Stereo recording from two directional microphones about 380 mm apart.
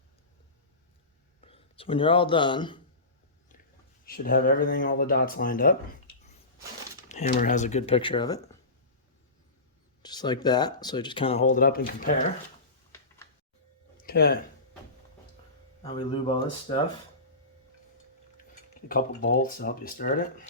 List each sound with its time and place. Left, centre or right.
1.4 s speech: centre
4.0 s speech: left
7.1 s speech: centre
10.0 s speech: centre
14.0 s a sound: left
15.8 s speech: centre
18.5 s speech: left